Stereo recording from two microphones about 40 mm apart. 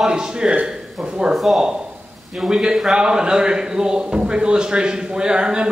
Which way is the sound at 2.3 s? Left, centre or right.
Centre.